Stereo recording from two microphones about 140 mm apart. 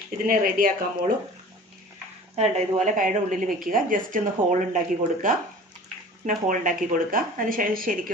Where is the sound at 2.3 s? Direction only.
50° right (ahead or behind); by 4.2 s 75° right (ahead or behind).